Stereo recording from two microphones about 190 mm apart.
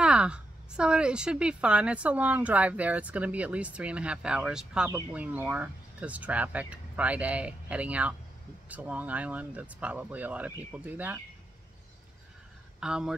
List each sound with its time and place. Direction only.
0.0 s a woman's voice: 5° right (ahead or behind)
12.8 s speech: 5° right (ahead or behind)